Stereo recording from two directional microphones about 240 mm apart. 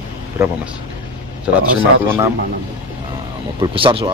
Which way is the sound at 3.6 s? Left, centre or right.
Right.